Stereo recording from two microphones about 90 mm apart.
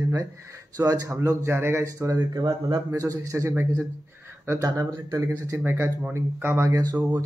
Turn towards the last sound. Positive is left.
turn(degrees=-40)  # may be behind; listen again after turning